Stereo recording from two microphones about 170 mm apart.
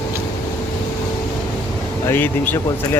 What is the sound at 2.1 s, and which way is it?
Speech, 10° left (ahead or behind).